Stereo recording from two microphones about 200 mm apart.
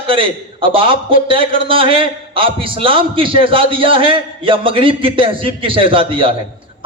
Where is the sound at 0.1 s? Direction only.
25° right (ahead or behind).